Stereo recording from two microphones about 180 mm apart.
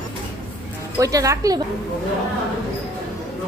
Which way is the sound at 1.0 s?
20° right (ahead or behind).